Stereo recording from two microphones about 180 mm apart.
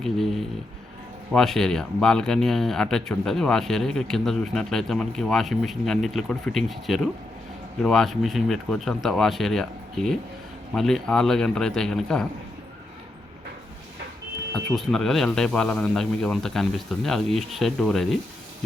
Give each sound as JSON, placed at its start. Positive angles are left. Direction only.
{"t": 0.0, "sound": "speech", "side_deg": 0}
{"t": 14.5, "sound": "speech", "side_deg": 0}